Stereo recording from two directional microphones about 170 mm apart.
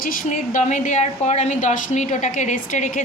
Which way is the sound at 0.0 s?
50° left (ahead or behind).